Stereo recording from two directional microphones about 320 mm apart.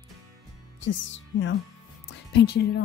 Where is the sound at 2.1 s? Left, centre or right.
Left.